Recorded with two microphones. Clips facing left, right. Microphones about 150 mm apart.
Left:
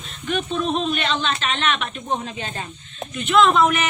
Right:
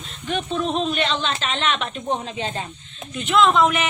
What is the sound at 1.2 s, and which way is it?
Speech, 25° right (ahead or behind).